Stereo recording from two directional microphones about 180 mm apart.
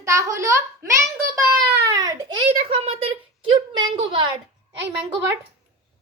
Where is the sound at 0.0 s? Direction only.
15° right (ahead or behind).